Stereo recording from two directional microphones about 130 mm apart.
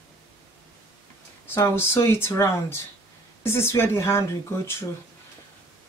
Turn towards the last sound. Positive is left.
turn(degrees=20)  # may be behind; listen again after turning